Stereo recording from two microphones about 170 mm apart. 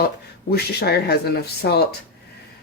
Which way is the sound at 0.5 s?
70° left (ahead or behind).